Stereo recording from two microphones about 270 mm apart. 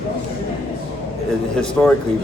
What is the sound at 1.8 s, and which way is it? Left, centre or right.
Speech, centre.